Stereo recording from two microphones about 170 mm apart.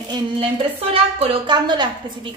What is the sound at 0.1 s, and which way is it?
A woman's voice, 35° right (ahead or behind).